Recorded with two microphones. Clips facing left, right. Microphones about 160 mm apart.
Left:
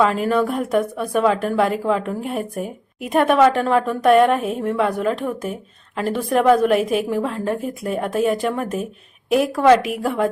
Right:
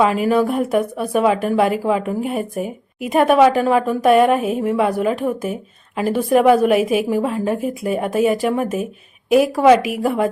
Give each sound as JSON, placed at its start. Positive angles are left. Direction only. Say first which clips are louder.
{"t": 0.0, "sound": "a woman's voice", "louder": "right 2 dB", "side_deg": -5}